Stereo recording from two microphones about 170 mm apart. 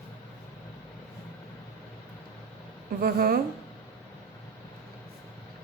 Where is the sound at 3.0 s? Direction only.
65° right (ahead or behind).